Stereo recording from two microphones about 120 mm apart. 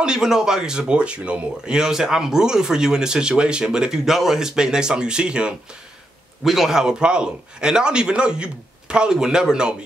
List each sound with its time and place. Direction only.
0.0 s a man's voice: 5° right (ahead or behind)